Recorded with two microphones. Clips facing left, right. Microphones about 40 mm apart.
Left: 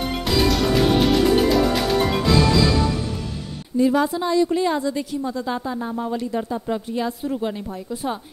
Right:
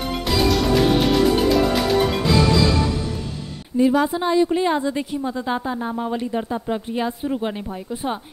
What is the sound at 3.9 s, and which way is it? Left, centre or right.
A woman's voice, right.